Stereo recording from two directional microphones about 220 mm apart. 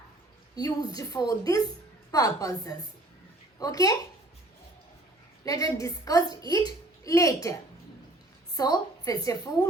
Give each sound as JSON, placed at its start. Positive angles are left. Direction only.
{"t": 0.5, "sound": "a woman's voice", "side_deg": 15}
{"t": 5.5, "sound": "a woman's voice", "side_deg": 15}
{"t": 8.5, "sound": "a woman's voice", "side_deg": 15}